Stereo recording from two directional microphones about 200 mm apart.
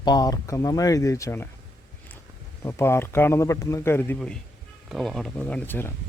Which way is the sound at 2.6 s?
10° left (ahead or behind).